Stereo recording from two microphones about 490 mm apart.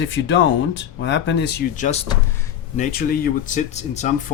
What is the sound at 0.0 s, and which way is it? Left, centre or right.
Speech, left.